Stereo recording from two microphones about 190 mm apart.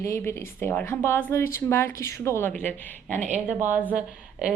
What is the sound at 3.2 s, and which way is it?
Speech, 40° right (ahead or behind).